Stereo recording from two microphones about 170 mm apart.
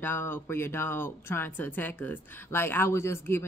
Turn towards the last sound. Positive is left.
turn(degrees=15)  # may be behind; listen again after turning